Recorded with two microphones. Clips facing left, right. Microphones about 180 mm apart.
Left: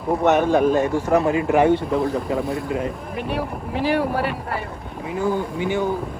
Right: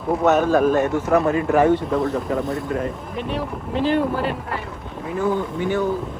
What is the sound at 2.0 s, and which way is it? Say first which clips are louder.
Speech: even; centre (ahead or behind).